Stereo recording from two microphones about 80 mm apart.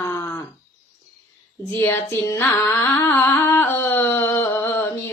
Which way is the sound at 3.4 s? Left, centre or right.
Left.